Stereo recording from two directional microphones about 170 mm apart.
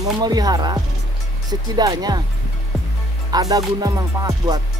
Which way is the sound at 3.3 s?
20° right (ahead or behind).